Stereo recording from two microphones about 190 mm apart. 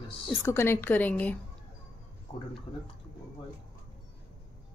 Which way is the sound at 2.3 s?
20° left (ahead or behind).